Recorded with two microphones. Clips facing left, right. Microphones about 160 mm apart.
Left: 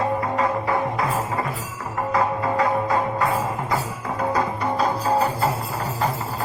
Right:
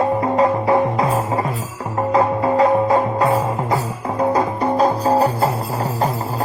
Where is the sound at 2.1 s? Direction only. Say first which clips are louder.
Right 6 dB; 25° right (ahead or behind).